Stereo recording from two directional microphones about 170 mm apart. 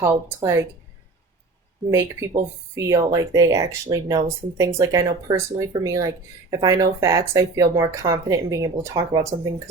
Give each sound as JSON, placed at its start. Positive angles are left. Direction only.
{"t": 0.0, "sound": "speech", "side_deg": -20}
{"t": 1.9, "sound": "speech", "side_deg": -20}